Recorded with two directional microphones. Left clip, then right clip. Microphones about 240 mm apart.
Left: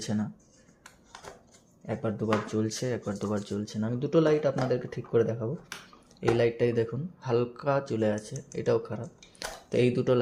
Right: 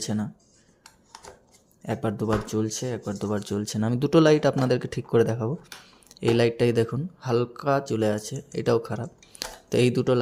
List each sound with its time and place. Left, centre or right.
0.0 s speech: centre
1.9 s speech: right